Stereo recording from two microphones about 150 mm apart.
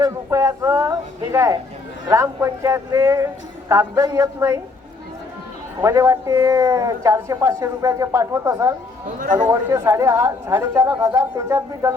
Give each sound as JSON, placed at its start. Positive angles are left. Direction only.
{"t": 0.0, "sound": "a sound", "side_deg": -20}
{"t": 2.0, "sound": "a man's voice", "side_deg": -20}
{"t": 5.8, "sound": "a man's voice", "side_deg": -20}